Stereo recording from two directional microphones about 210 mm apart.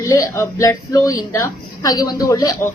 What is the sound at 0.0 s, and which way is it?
A child's voice, 15° left (ahead or behind).